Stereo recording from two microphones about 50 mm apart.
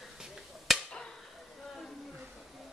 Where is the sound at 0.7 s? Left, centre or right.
Centre.